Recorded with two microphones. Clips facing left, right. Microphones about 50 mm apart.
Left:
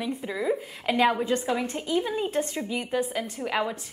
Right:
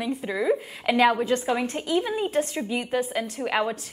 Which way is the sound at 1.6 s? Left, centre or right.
Right.